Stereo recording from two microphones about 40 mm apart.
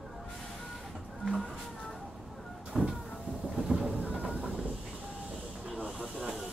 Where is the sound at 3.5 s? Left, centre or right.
Centre.